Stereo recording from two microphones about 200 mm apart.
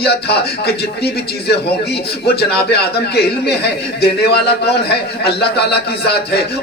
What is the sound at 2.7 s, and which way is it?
Speech, 55° left (ahead or behind).